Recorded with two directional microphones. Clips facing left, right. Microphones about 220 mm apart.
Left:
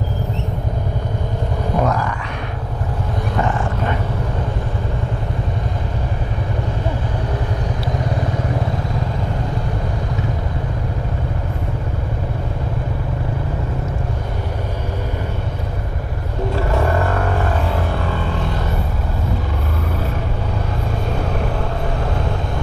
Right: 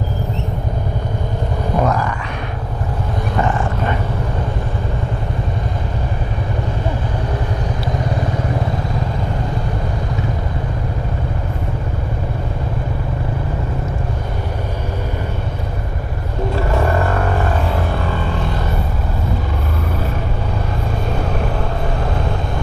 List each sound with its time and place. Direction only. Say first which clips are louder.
1.8 s a sound: right 1 dB; 20° right (ahead or behind)
3.3 s dog: right 2 dB; 20° right (ahead or behind)
16.7 s vehicle: right 1 dB; 20° right (ahead or behind)